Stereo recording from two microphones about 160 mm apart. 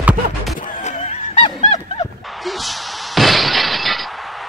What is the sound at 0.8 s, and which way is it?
Honk, 45° left (ahead or behind).